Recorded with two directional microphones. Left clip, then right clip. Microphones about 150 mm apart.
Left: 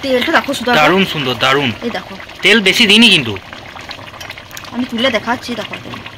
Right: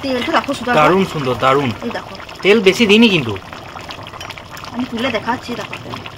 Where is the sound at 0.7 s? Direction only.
5° right (ahead or behind).